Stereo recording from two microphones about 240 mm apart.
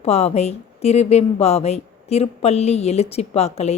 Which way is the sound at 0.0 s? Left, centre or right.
Left.